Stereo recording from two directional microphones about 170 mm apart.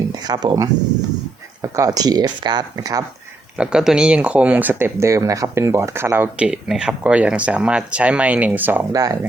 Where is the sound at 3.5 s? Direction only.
5° right (ahead or behind).